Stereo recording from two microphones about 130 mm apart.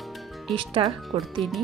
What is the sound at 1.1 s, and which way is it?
Speech, 50° right (ahead or behind).